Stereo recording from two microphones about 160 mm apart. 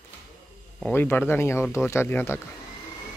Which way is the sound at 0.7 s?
10° left (ahead or behind).